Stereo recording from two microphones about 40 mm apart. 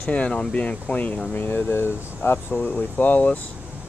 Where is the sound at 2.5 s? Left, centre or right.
Left.